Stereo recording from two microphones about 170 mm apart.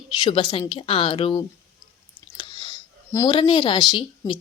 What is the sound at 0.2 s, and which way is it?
A woman's voice, 30° left (ahead or behind).